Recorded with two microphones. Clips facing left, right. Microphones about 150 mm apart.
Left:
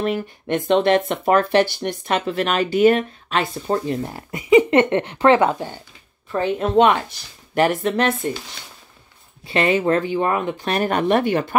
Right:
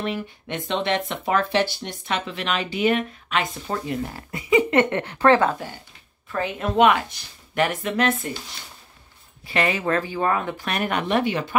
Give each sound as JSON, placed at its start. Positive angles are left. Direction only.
{"t": 0.0, "sound": "speech", "side_deg": 45}
{"t": 4.3, "sound": "speech", "side_deg": 20}
{"t": 6.3, "sound": "a woman's voice", "side_deg": 30}
{"t": 9.5, "sound": "speech", "side_deg": 30}
{"t": 10.7, "sound": "speech", "side_deg": 35}